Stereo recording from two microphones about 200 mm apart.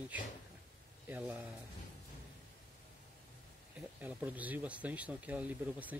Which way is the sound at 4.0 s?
10° right (ahead or behind).